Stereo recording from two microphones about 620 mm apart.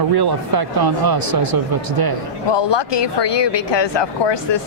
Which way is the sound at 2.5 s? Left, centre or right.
Left.